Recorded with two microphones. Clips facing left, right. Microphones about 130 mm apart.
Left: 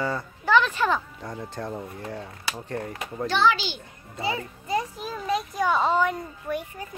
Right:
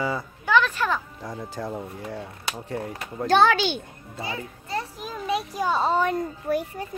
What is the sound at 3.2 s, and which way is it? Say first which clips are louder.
Speech: right 4 dB; 55° right (ahead or behind).